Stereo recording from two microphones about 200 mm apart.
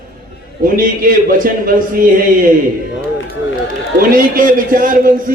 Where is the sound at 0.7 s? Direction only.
45° right (ahead or behind).